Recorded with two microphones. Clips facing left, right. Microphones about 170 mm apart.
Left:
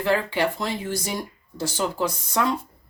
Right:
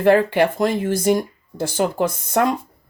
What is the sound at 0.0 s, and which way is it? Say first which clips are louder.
Speech: right 8 dB; 50° right (ahead or behind).